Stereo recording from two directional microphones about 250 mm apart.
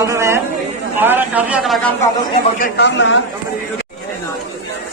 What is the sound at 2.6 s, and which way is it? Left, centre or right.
Speech, left.